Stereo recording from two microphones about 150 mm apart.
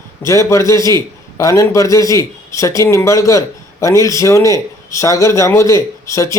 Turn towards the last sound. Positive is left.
turn(degrees=20)  # may be behind; listen again after turning